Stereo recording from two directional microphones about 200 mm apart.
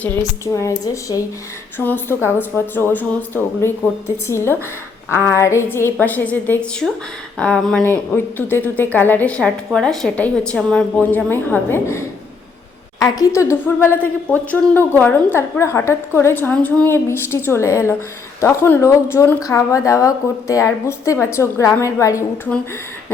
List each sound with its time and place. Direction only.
0.0 s speech: 15° left (ahead or behind)